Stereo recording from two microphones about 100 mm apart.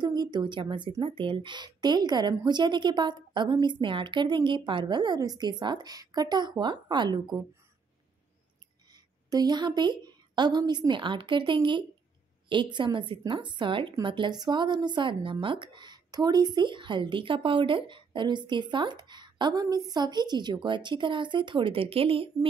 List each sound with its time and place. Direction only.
0.0 s speech: 45° right (ahead or behind)
8.9 s a woman's voice: 45° right (ahead or behind); by 22.5 s 65° right (ahead or behind)